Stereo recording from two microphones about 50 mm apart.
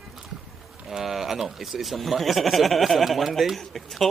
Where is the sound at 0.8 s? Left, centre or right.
Centre.